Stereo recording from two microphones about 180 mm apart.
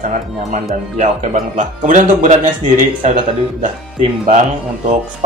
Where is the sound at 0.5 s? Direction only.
40° right (ahead or behind).